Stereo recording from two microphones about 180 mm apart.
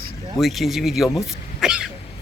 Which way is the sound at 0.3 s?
Centre (ahead or behind).